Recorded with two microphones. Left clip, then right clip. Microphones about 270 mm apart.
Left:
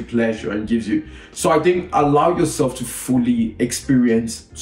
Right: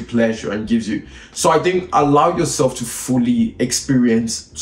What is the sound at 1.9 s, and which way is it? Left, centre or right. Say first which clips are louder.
Speech: right 3 dB; centre.